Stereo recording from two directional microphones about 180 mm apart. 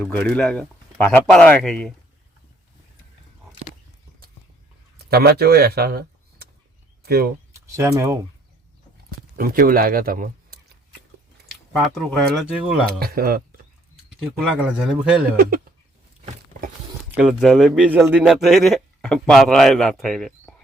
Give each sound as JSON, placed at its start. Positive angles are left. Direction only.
{"t": 0.0, "sound": "speech", "side_deg": 10}
{"t": 5.0, "sound": "speech", "side_deg": -60}
{"t": 7.5, "sound": "speech", "side_deg": -15}
{"t": 9.0, "sound": "speech", "side_deg": -60}
{"t": 11.7, "sound": "speech", "side_deg": 0}
{"t": 13.0, "sound": "speech", "side_deg": -55}
{"t": 14.4, "sound": "speech", "side_deg": -5}
{"t": 15.4, "sound": "speech", "side_deg": -55}
{"t": 17.1, "sound": "speech", "side_deg": -5}